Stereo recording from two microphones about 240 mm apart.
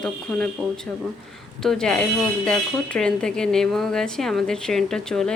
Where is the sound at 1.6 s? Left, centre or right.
Centre.